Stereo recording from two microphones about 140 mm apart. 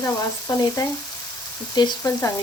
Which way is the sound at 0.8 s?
25° left (ahead or behind).